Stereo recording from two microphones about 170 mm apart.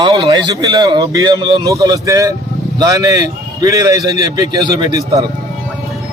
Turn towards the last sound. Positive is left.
turn(degrees=-20)  # may be behind; listen again after turning